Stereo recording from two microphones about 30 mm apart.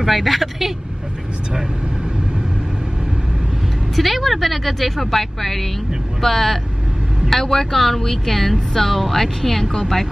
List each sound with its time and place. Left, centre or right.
0.0 s a woman's voice: centre
3.9 s a woman's voice: centre